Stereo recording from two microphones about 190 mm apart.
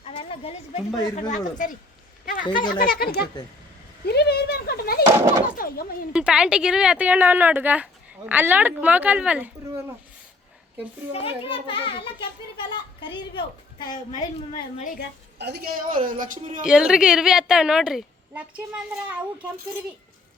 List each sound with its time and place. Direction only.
0.0 s a sound: 30° left (ahead or behind)
1.1 s speech: 40° left (ahead or behind)
2.2 s a sound: 45° left (ahead or behind)
2.7 s a woman's voice: 50° left (ahead or behind)
5.5 s a sound: 50° left (ahead or behind)
6.1 s speech: 5° right (ahead or behind)
11.4 s a child's voice: 30° left (ahead or behind)
14.2 s a woman's voice: 40° left (ahead or behind)
15.4 s speech: 60° right (ahead or behind); by 16.6 s 45° right (ahead or behind)
16.6 s a woman's voice: 5° right (ahead or behind)